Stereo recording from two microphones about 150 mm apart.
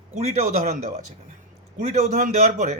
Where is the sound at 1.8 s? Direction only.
45° right (ahead or behind).